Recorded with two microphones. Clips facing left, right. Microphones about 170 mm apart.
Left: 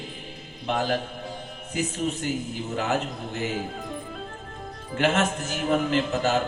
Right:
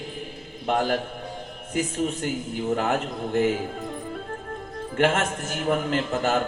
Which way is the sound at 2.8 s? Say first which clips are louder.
Right 1 dB; 50° right (ahead or behind).